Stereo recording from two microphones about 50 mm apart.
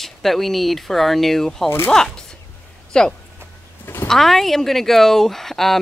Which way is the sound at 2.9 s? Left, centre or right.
Centre.